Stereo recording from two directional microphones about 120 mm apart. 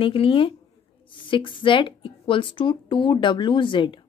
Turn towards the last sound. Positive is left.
turn(degrees=40)  # may be behind; listen again after turning